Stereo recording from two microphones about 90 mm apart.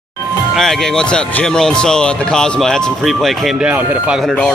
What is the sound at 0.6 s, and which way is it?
Speech, 5° left (ahead or behind).